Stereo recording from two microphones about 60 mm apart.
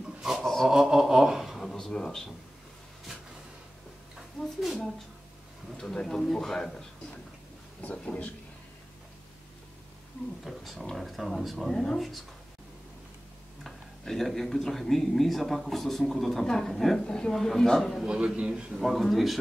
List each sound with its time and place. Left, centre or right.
0.2 s a sound: centre
4.7 s a man's voice: centre
10.4 s speech: centre
13.7 s speech: centre
18.0 s a man's voice: centre
18.8 s speech: centre